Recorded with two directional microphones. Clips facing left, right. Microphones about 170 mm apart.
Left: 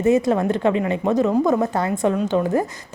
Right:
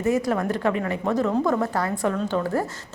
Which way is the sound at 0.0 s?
25° left (ahead or behind).